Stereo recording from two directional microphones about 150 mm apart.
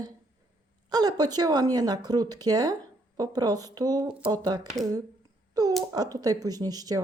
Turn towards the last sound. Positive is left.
turn(degrees=-25)  # may be behind; listen again after turning